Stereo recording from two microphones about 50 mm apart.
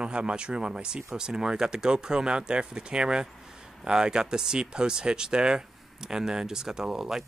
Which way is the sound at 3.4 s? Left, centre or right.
Centre.